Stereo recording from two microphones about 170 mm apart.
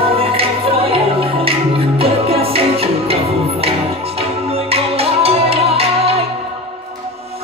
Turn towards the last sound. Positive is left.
turn(degrees=-35)  # may be behind; listen again after turning